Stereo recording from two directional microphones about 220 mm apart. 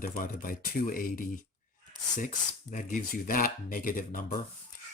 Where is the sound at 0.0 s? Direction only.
40° left (ahead or behind).